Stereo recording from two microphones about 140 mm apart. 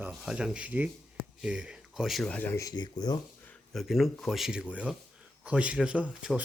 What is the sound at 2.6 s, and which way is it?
Speech, 30° left (ahead or behind).